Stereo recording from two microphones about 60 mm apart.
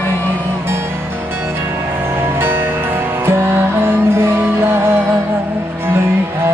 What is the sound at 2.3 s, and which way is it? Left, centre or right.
Music, right.